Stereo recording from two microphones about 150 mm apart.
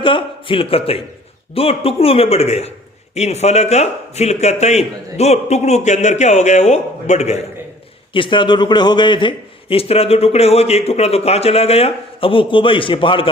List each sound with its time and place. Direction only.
0.0 s a man's voice: 35° left (ahead or behind)
8.1 s a man's voice: 35° left (ahead or behind)